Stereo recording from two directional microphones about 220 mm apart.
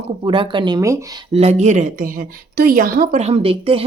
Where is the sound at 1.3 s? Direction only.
30° right (ahead or behind).